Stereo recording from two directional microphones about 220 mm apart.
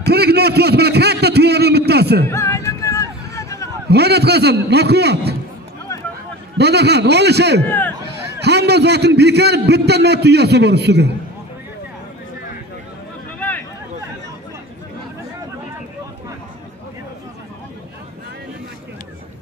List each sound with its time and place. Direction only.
0.0 s a sound: 45° right (ahead or behind)
2.2 s music: 10° left (ahead or behind)
3.9 s a man's voice: 50° right (ahead or behind)
6.6 s a man's voice: 50° right (ahead or behind)
7.6 s speech: 10° left (ahead or behind)
8.4 s a man's voice: 50° right (ahead or behind)